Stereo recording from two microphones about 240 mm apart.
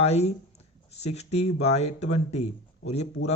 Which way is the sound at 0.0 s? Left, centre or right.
Left.